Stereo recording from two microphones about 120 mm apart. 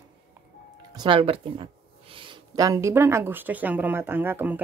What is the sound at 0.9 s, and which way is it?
Speech, 45° right (ahead or behind).